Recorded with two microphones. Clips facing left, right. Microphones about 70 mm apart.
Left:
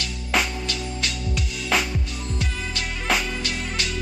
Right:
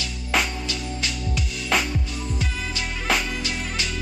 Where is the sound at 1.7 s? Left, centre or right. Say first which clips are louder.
Even; centre.